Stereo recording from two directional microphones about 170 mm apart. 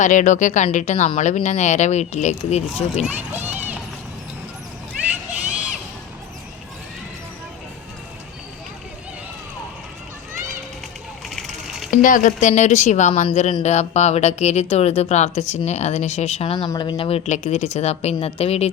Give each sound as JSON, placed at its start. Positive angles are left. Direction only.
{"t": 0.0, "sound": "speech", "side_deg": 45}
{"t": 3.0, "sound": "speech", "side_deg": -10}
{"t": 11.3, "sound": "a sound", "side_deg": 0}
{"t": 11.9, "sound": "speech", "side_deg": 50}